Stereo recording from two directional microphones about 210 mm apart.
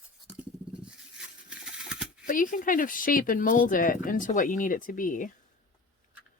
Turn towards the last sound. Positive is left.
turn(degrees=40)  # may be behind; listen again after turning